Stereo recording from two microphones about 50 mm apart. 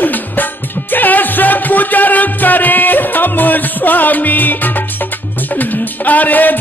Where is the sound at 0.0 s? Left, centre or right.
Left.